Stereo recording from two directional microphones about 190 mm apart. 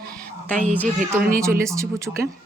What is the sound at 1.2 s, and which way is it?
Speech, 50° right (ahead or behind).